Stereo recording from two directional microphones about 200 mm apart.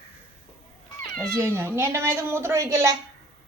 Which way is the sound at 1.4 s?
10° right (ahead or behind).